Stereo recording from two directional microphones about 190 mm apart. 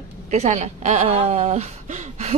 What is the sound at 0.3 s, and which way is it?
Speech, 35° right (ahead or behind).